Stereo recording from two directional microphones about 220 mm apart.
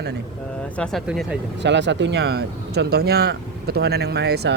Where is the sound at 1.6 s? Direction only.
55° right (ahead or behind).